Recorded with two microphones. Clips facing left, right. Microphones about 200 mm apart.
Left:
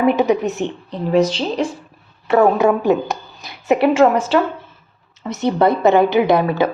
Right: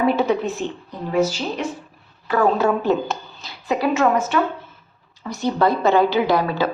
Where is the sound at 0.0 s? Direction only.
15° left (ahead or behind).